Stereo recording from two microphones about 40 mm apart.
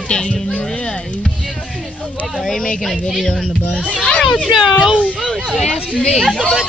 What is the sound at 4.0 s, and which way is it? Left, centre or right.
Speech, left.